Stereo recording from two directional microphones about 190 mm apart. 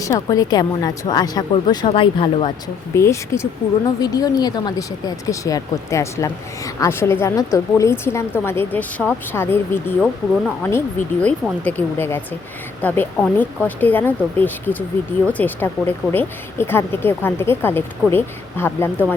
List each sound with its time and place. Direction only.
0.0 s a woman's voice: 20° left (ahead or behind)
2.9 s a woman's voice: 15° left (ahead or behind)